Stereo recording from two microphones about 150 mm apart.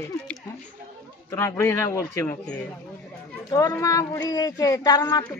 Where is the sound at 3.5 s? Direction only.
20° left (ahead or behind).